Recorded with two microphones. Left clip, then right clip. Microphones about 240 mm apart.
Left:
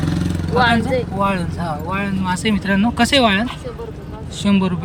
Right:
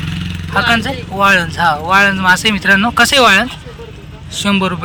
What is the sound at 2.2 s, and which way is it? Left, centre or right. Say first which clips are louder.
Speech: right 10 dB; centre.